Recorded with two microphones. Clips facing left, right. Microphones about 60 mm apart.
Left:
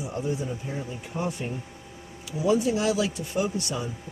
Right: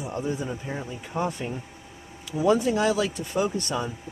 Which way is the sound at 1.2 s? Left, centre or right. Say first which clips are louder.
Right 3 dB; right.